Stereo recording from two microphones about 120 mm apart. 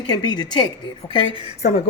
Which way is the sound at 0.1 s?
35° left (ahead or behind).